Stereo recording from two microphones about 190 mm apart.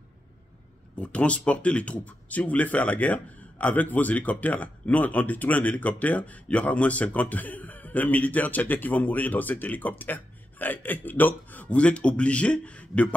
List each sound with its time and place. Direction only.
0.9 s speech: 5° left (ahead or behind)